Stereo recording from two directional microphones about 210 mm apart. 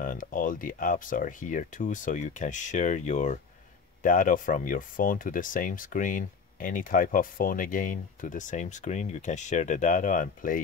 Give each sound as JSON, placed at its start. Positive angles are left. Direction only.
{"t": 0.0, "sound": "speech", "side_deg": 40}